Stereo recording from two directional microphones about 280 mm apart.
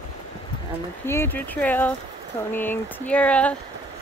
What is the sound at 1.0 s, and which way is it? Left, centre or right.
Speech, centre.